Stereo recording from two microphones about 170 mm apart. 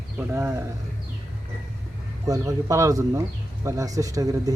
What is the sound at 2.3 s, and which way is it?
Speech, 20° right (ahead or behind).